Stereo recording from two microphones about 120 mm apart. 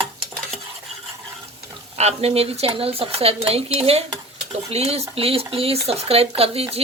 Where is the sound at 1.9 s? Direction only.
60° right (ahead or behind).